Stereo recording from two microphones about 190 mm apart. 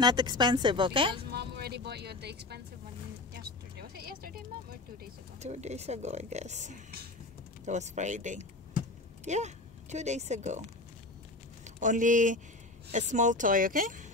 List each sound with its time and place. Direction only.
0.0 s a woman's voice: 25° right (ahead or behind)
1.3 s speech: 55° right (ahead or behind)
3.3 s vehicle: 55° right (ahead or behind)
5.4 s speech: 35° right (ahead or behind)
11.6 s speech: 40° right (ahead or behind)